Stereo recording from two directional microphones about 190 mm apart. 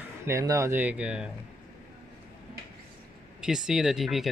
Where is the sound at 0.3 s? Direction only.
15° right (ahead or behind).